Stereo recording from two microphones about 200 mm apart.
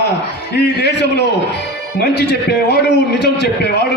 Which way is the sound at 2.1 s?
55° left (ahead or behind).